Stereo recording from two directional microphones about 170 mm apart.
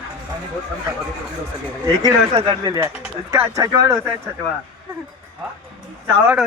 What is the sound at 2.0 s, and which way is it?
Speech, 25° right (ahead or behind).